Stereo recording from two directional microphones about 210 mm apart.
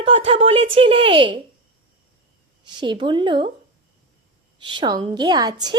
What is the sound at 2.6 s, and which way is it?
Speech, 20° right (ahead or behind).